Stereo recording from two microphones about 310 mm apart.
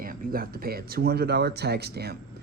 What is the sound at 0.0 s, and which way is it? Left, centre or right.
Speech, right.